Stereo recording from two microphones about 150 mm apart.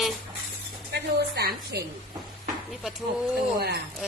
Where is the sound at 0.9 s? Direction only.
90° right.